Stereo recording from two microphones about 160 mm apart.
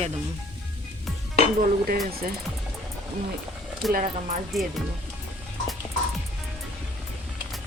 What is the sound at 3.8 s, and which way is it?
Speech, centre (ahead or behind).